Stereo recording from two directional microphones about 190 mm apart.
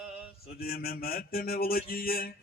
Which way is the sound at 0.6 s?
50° left (ahead or behind).